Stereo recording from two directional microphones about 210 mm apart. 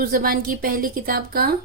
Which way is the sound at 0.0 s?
40° right (ahead or behind).